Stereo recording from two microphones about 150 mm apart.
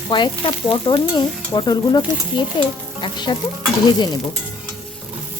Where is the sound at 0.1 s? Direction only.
35° left (ahead or behind).